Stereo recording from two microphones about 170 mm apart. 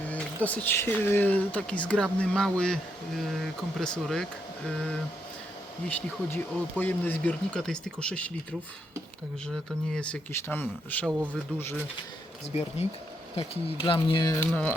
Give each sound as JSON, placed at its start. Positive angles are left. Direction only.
{"t": 0.4, "sound": "speech", "side_deg": 10}
{"t": 9.9, "sound": "speech", "side_deg": 5}
{"t": 13.3, "sound": "speech", "side_deg": 35}
{"t": 14.5, "sound": "speech", "side_deg": 10}